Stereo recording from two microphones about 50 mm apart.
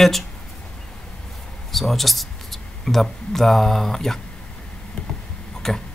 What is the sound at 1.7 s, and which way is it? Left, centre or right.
Speech, centre.